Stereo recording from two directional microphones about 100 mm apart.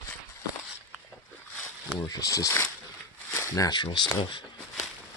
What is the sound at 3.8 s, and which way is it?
Speech, 50° left (ahead or behind).